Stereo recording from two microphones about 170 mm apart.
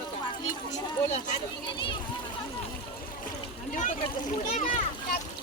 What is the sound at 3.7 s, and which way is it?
A child's voice, 50° left (ahead or behind).